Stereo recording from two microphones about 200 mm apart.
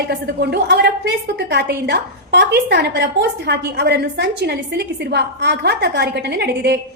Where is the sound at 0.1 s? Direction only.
55° right (ahead or behind).